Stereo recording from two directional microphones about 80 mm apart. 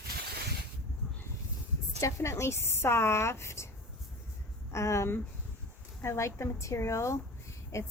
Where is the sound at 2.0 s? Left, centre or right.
Left.